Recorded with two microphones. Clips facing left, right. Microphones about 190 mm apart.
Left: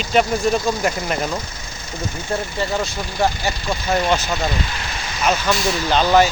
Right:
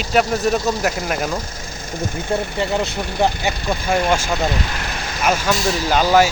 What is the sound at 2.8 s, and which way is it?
Speech, 60° right (ahead or behind).